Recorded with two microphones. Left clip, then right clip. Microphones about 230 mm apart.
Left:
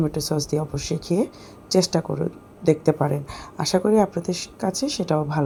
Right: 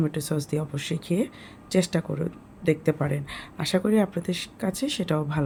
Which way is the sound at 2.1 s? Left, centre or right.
Centre.